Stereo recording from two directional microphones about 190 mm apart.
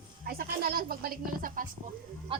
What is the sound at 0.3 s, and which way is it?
Speech, 50° right (ahead or behind).